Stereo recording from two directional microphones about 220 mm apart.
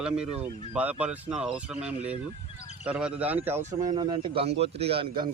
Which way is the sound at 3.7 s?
20° right (ahead or behind).